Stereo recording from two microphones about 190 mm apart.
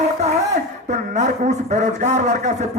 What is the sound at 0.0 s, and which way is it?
Speech, 35° right (ahead or behind).